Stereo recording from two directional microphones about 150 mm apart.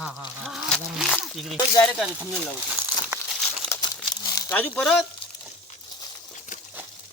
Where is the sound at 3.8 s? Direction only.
25° left (ahead or behind).